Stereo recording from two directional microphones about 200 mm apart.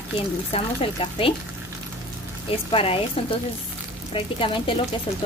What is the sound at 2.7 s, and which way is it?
Speech, 30° left (ahead or behind).